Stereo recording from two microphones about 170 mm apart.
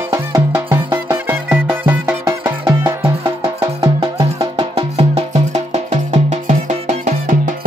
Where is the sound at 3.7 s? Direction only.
35° right (ahead or behind); by 7.6 s 50° right (ahead or behind).